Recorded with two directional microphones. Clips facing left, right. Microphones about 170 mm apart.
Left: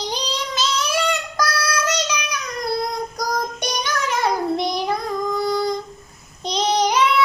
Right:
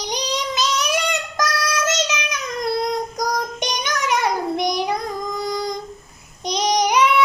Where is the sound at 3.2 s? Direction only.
20° right (ahead or behind).